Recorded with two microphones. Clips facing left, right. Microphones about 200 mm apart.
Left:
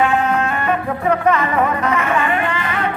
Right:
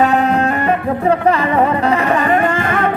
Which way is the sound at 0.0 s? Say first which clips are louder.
Right 3 dB; 35° right (ahead or behind).